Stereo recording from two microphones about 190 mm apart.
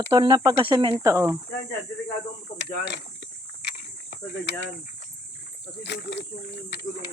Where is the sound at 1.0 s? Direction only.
15° right (ahead or behind).